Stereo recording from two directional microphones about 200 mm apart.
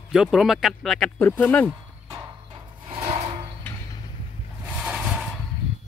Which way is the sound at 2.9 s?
30° right (ahead or behind).